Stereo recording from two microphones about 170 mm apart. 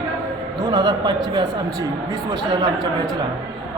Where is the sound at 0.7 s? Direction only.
25° right (ahead or behind).